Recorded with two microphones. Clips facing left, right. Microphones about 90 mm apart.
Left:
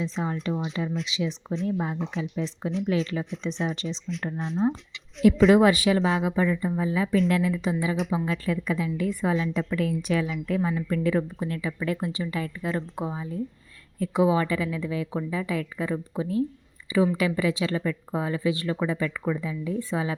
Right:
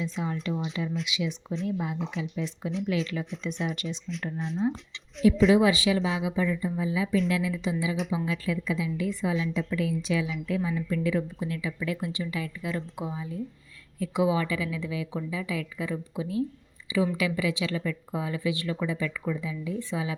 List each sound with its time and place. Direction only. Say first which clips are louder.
0.0 s a woman's voice: left 2 dB; 35° left (ahead or behind)
4.1 s speech: left 3 dB; centre (ahead or behind)
5.2 s a woman's voice: left 3 dB; 45° left (ahead or behind)